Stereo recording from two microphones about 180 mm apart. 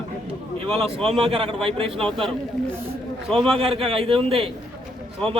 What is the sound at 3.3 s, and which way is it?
Speech, centre (ahead or behind).